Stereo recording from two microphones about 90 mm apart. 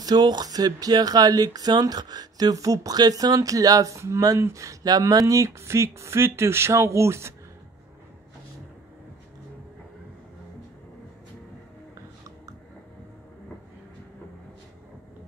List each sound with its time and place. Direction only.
0.0 s speech: 55° right (ahead or behind); by 7.3 s 30° right (ahead or behind)